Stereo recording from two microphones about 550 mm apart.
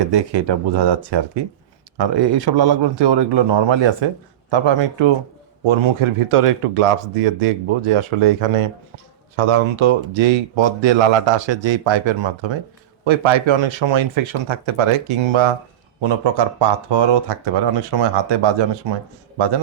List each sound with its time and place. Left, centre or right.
0.0 s speech: right